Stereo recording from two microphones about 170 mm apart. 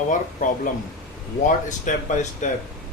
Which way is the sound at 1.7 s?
45° left (ahead or behind).